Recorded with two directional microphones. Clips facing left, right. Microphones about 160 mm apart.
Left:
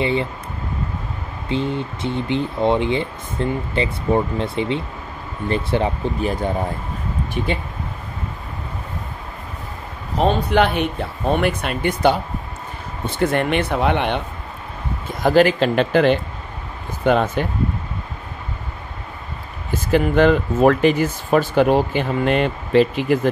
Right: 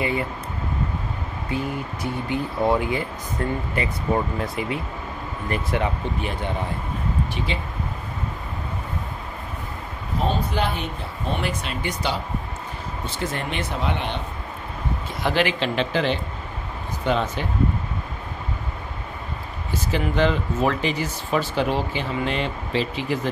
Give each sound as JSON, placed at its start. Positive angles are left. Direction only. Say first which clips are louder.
{"t": 0.0, "sound": "speech", "louder": "left 4 dB", "side_deg": 25}
{"t": 1.5, "sound": "speech", "louder": "left 5 dB", "side_deg": 25}
{"t": 10.1, "sound": "speech", "louder": "left 8 dB", "side_deg": 70}
{"t": 15.2, "sound": "speech", "louder": "left 8 dB", "side_deg": 45}
{"t": 19.7, "sound": "speech", "louder": "left 7 dB", "side_deg": 55}